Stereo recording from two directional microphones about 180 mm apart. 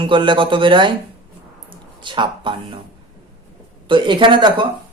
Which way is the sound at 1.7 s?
25° right (ahead or behind).